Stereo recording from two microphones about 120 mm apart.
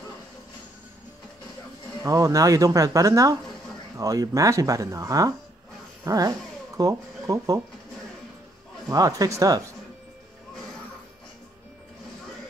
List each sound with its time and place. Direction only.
2.0 s speech: 25° right (ahead or behind)
8.8 s speech: 30° right (ahead or behind)